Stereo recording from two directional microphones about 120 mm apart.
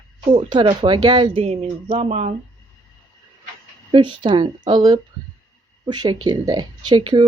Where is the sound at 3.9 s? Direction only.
40° right (ahead or behind).